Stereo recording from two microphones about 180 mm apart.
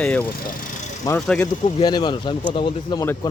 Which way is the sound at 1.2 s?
5° left (ahead or behind).